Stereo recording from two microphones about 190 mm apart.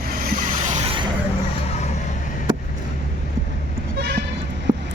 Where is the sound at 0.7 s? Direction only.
30° right (ahead or behind).